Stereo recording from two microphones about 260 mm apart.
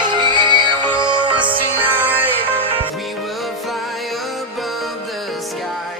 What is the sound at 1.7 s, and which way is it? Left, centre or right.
Music, centre.